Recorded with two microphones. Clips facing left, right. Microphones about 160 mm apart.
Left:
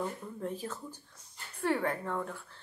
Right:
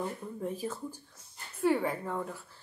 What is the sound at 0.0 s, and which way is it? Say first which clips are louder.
Speech: right 1 dB; 10° right (ahead or behind).